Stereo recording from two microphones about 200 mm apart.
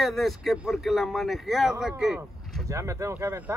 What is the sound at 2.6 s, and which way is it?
Speech, 15° right (ahead or behind).